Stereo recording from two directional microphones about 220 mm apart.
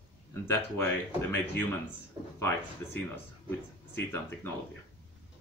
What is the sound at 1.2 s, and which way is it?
Speech, 10° left (ahead or behind).